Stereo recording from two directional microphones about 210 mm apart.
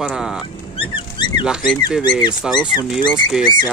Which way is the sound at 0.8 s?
20° left (ahead or behind).